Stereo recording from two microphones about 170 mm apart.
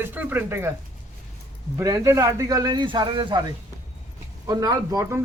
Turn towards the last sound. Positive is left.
turn(degrees=-15)  # may be behind; listen again after turning